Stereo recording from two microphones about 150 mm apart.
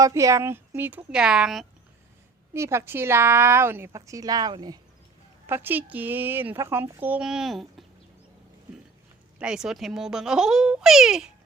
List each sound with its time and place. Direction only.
0.0 s speech: 20° right (ahead or behind); by 1.6 s 5° right (ahead or behind)
2.5 s speech: 15° right (ahead or behind)
5.5 s speech: 15° right (ahead or behind)
9.4 s a child's voice: 5° right (ahead or behind)